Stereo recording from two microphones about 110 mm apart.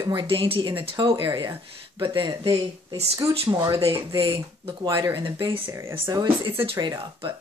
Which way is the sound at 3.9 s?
50° right (ahead or behind).